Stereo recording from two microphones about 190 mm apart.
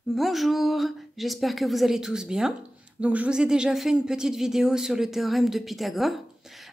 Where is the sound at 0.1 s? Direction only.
Centre (ahead or behind).